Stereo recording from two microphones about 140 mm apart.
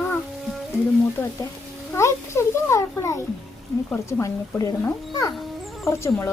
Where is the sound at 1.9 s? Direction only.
20° left (ahead or behind).